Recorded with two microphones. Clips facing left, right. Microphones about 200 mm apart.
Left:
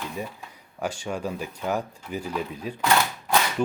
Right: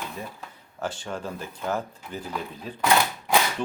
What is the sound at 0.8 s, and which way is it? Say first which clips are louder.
Speech: left 3 dB; 10° left (ahead or behind).